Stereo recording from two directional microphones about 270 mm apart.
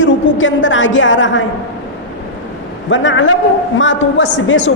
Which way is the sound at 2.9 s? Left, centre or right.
Left.